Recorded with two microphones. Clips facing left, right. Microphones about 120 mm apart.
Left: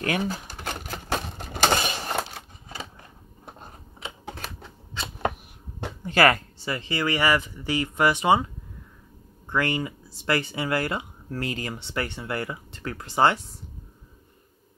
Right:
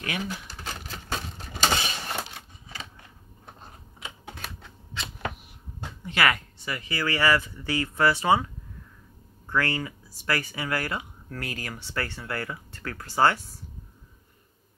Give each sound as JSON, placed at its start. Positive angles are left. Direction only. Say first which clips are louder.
{"t": 0.0, "sound": "speech", "louder": "left 6 dB", "side_deg": 40}
{"t": 0.5, "sound": "typewriter", "louder": "left 4 dB", "side_deg": 50}
{"t": 1.0, "sound": "a sound", "louder": "left 5 dB", "side_deg": 60}
{"t": 6.0, "sound": "speech", "louder": "left 5 dB", "side_deg": 40}
{"t": 9.5, "sound": "speech", "louder": "left 2 dB", "side_deg": 20}